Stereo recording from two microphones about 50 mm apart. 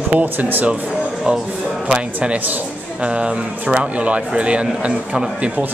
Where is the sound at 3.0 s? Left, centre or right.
Right.